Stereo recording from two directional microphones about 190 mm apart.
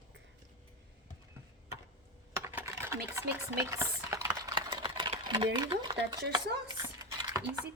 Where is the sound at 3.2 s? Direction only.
15° right (ahead or behind).